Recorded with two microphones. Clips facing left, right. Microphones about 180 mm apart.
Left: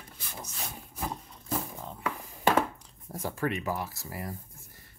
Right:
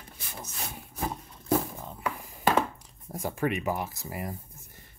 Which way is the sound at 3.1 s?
15° right (ahead or behind).